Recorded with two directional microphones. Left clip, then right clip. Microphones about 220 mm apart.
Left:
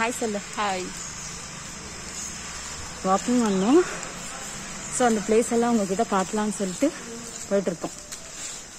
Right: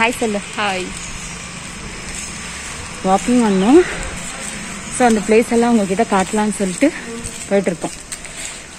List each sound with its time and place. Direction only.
0.6 s speech: 20° left (ahead or behind)
3.1 s speech: 5° left (ahead or behind)
4.9 s speech: 5° left (ahead or behind)